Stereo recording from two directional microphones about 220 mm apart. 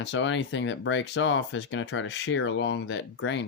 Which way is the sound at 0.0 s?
55° left (ahead or behind).